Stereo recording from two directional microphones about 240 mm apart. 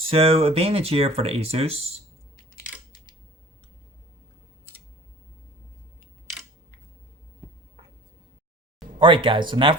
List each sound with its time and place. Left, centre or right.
0.0 s speech: right
9.0 s speech: right